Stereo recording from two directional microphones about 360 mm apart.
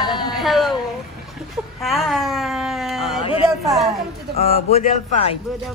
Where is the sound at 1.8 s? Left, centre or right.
Centre.